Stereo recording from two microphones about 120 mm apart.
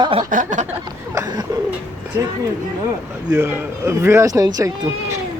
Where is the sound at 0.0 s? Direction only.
50° right (ahead or behind).